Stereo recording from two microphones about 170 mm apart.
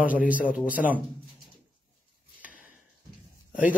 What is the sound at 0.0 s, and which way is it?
Speech, 10° right (ahead or behind).